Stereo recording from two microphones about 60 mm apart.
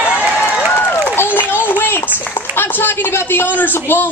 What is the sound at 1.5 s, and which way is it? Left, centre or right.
A woman's voice, left.